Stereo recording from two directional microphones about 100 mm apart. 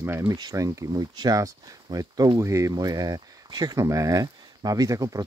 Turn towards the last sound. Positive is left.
turn(degrees=-35)  # may be behind; listen again after turning